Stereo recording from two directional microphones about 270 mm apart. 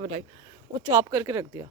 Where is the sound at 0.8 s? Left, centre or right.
Centre.